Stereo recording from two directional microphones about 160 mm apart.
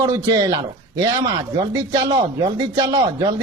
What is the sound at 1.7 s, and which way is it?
A man's voice, 25° right (ahead or behind).